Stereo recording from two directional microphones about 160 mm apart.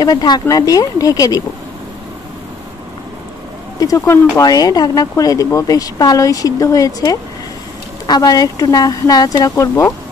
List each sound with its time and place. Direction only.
0.0 s speech: 25° left (ahead or behind)
3.8 s speech: 20° left (ahead or behind)